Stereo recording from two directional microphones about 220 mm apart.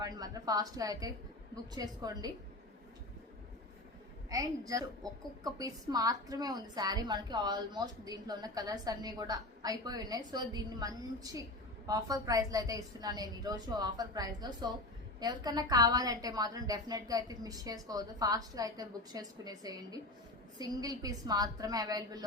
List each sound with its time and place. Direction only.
0.0 s a woman's voice: 15° right (ahead or behind)
4.3 s a woman's voice: 15° right (ahead or behind)